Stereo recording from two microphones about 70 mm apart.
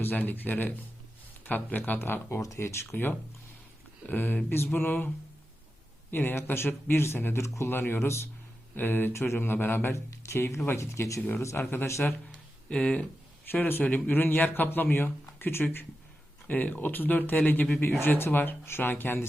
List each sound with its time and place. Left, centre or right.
0.0 s speech: left
2.4 s speech: left
2.9 s speech: left
6.1 s speech: left
8.7 s speech: left
11.2 s speech: left
11.9 s speech: left
12.7 s speech: centre
13.5 s speech: left